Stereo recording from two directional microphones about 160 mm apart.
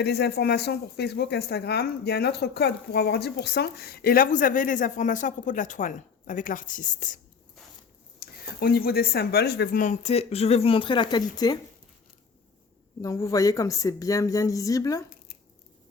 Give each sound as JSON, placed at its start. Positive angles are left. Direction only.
{"t": 0.0, "sound": "speech", "side_deg": 90}
{"t": 8.2, "sound": "speech", "side_deg": 70}
{"t": 9.8, "sound": "speech", "side_deg": 45}
{"t": 13.0, "sound": "speech", "side_deg": 20}